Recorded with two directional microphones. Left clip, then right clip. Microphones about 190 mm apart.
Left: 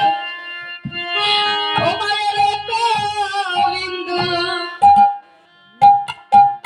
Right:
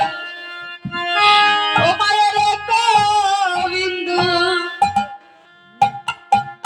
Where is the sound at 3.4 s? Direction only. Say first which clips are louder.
Even; 35° right (ahead or behind).